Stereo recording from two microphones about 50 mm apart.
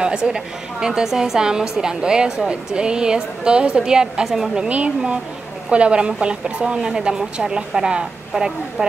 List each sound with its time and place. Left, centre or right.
0.0 s a woman's voice: centre
4.6 s a woman's voice: right